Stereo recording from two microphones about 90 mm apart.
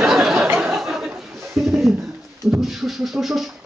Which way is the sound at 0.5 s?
5° right (ahead or behind).